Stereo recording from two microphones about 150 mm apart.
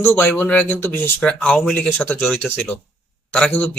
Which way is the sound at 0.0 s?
15° left (ahead or behind).